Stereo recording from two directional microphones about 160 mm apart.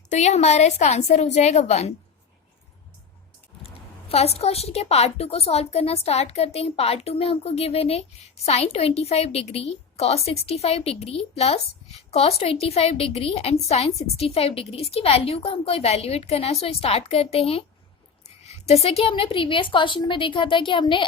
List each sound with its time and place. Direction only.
0.1 s a woman's voice: 45° left (ahead or behind)
4.1 s a woman's voice: 40° left (ahead or behind)